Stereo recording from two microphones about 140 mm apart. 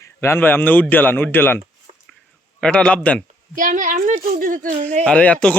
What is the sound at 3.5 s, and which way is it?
Speech, 70° right (ahead or behind).